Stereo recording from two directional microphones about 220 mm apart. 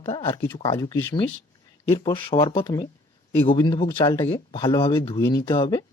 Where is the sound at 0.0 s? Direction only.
20° left (ahead or behind).